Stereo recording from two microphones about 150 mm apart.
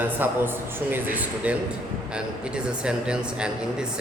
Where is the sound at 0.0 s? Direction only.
15° right (ahead or behind).